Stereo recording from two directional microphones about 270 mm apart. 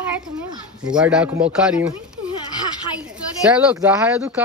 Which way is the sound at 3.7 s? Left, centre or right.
Centre.